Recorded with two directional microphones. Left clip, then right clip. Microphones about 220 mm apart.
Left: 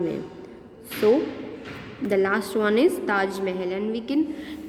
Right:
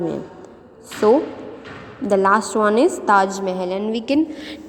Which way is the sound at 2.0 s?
15° right (ahead or behind).